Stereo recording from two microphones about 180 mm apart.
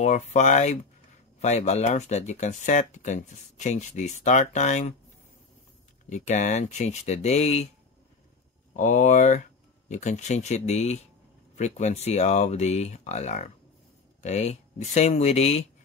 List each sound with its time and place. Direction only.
0.0 s speech: 40° left (ahead or behind)
6.0 s speech: 40° left (ahead or behind)
8.7 s speech: 45° left (ahead or behind)